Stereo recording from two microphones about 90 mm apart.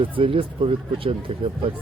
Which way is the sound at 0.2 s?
90° right.